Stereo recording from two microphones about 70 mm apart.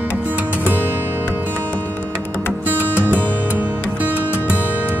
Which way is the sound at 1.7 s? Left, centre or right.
Left.